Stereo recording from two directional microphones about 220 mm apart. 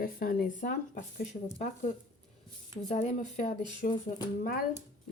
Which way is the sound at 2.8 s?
30° left (ahead or behind).